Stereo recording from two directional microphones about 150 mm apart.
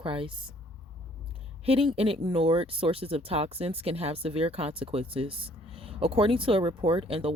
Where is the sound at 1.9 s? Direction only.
40° right (ahead or behind).